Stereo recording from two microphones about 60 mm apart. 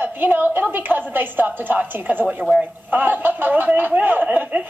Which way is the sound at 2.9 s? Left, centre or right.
Right.